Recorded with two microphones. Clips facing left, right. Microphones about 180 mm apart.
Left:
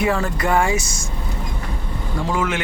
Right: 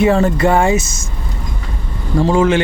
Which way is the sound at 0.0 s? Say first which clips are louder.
Right 8 dB; 25° right (ahead or behind).